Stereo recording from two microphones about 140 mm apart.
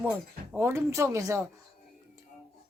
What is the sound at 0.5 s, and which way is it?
Speech, 20° right (ahead or behind).